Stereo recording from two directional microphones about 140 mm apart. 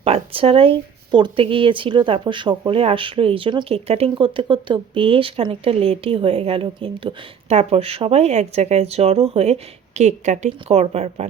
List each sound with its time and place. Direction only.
0.0 s speech: 45° right (ahead or behind)